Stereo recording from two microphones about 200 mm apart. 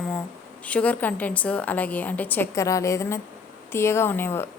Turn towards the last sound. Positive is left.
turn(degrees=10)  # may be behind; listen again after turning